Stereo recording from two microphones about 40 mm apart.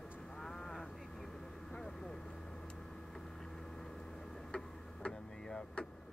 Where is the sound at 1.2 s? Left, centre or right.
Centre.